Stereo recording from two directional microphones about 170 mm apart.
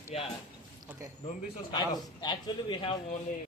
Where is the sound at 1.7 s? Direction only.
25° left (ahead or behind).